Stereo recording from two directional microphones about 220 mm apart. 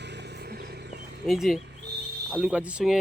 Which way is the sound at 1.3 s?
Centre (ahead or behind).